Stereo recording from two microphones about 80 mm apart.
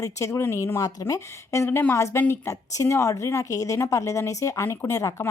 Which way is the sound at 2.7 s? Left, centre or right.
Left.